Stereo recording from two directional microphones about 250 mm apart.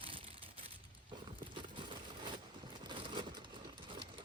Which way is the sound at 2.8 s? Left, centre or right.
Centre.